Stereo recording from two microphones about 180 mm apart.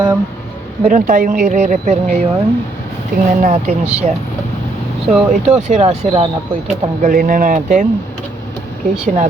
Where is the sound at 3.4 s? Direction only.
40° right (ahead or behind).